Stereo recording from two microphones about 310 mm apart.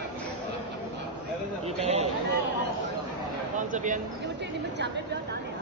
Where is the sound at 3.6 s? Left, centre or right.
Right.